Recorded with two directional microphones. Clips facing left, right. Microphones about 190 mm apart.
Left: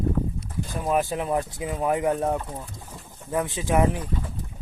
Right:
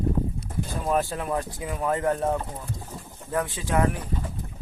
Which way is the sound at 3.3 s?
20° left (ahead or behind).